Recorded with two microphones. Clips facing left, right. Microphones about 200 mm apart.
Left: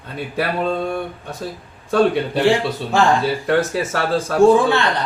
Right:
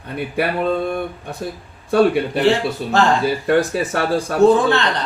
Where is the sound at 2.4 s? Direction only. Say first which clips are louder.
Left 1 dB; 15° left (ahead or behind).